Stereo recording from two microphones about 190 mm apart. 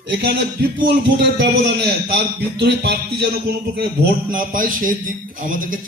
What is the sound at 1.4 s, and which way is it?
Speech, 60° right (ahead or behind).